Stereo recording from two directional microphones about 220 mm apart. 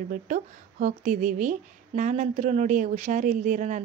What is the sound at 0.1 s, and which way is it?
A woman's voice, 40° right (ahead or behind).